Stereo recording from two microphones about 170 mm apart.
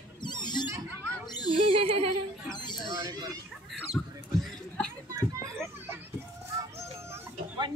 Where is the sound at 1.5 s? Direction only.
35° right (ahead or behind).